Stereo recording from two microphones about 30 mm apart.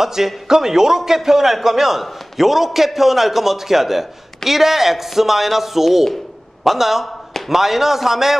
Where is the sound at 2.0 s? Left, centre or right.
Centre.